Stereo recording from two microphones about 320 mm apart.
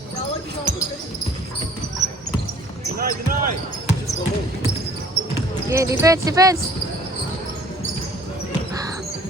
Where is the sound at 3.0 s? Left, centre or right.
Right.